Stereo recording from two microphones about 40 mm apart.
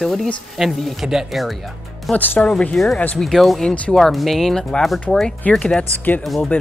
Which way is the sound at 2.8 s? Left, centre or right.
Centre.